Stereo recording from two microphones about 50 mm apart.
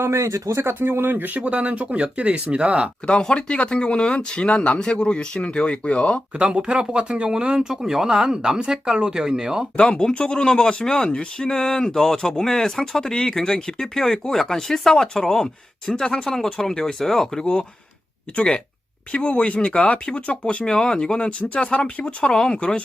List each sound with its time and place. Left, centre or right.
0.0 s speech: right
0.6 s speech: right
1.4 s speech: right
3.1 s speech: centre
6.4 s speech: right
10.0 s speech: centre
17.4 s speech: centre